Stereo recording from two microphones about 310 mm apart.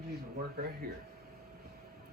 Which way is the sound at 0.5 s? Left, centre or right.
Right.